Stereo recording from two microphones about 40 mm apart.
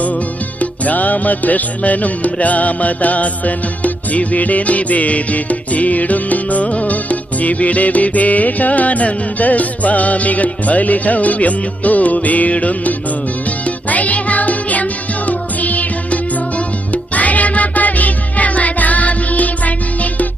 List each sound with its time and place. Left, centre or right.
0.6 s music: left
16.9 s music: left